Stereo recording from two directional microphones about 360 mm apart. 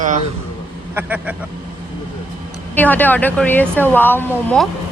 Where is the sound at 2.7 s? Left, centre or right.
Centre.